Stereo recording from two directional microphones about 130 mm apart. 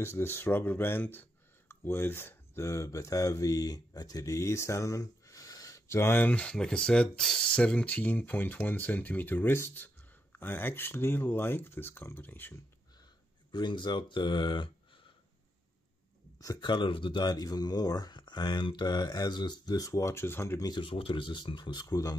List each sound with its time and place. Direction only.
0.0 s speech: 20° left (ahead or behind)
13.5 s speech: 35° left (ahead or behind)
16.3 s speech: 30° left (ahead or behind)
20.7 s speech: 40° left (ahead or behind)